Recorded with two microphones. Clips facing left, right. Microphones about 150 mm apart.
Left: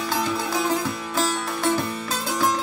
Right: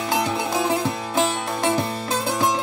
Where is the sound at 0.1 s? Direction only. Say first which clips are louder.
Right 3 dB; 20° right (ahead or behind).